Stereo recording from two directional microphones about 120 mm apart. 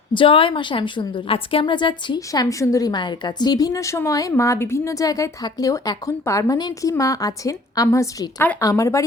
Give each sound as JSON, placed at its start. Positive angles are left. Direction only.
{"t": 0.1, "sound": "a woman's voice", "side_deg": 45}